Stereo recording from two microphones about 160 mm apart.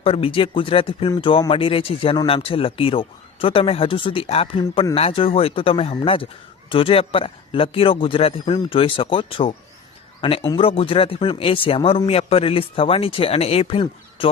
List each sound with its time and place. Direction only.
0.0 s speech: 35° left (ahead or behind)